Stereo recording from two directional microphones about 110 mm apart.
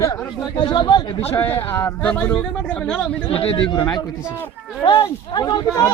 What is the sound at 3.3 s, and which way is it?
Speech, 55° left (ahead or behind).